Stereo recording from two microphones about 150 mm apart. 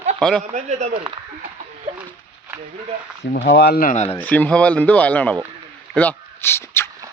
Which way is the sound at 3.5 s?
90° left.